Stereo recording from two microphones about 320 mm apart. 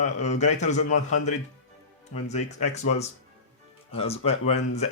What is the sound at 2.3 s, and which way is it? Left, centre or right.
Speech, left.